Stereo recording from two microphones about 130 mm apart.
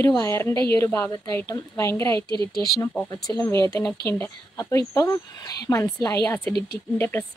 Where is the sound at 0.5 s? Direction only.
40° right (ahead or behind).